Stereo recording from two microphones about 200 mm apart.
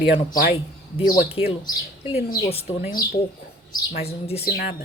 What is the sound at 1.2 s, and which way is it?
A woman's voice, 30° left (ahead or behind).